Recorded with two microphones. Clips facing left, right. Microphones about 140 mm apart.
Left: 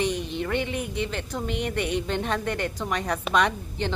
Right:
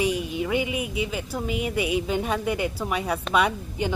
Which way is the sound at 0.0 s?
10° right (ahead or behind).